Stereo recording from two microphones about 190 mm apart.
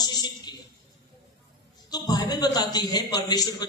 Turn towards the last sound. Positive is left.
turn(degrees=20)  # may be behind; listen again after turning